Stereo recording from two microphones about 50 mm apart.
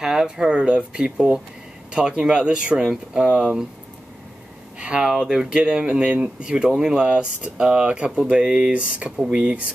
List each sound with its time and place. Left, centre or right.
0.0 s speech: centre
4.7 s speech: right